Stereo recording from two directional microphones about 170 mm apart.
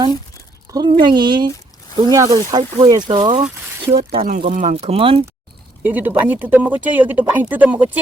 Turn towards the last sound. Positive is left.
turn(degrees=-10)  # may be behind; listen again after turning